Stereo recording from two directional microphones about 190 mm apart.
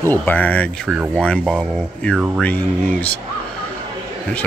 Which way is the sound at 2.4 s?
10° left (ahead or behind).